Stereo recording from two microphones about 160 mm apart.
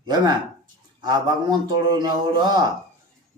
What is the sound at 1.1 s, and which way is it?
Speech, 25° right (ahead or behind).